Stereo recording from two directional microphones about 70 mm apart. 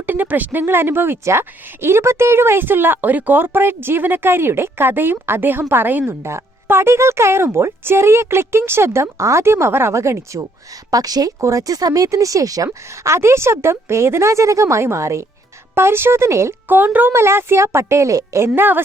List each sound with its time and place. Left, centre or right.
0.0 s speech: right
6.2 s speech: right
10.9 s a woman's voice: right
11.3 s speech: right
16.6 s speech: right
17.1 s speech: right
18.4 s speech: right